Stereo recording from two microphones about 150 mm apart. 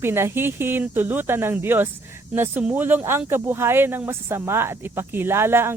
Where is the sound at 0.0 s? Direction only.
15° right (ahead or behind).